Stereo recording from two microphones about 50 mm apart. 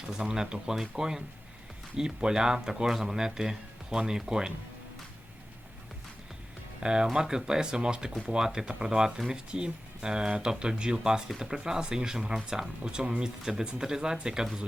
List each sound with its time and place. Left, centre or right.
0.1 s speech: centre
6.7 s speech: centre